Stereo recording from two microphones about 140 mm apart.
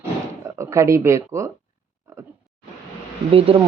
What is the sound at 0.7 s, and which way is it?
Speech, 20° right (ahead or behind).